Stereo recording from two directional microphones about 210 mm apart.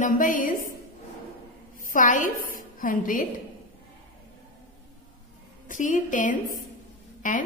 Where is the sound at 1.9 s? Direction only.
40° left (ahead or behind).